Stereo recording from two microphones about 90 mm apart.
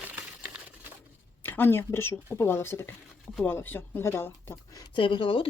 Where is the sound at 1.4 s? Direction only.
25° left (ahead or behind).